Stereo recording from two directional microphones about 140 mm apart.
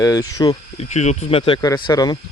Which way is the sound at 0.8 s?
55° left (ahead or behind).